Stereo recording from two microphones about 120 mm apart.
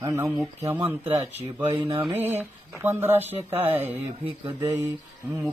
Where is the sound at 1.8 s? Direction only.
40° right (ahead or behind).